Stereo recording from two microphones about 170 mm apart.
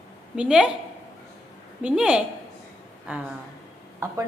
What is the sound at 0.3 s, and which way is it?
Speech, 5° right (ahead or behind).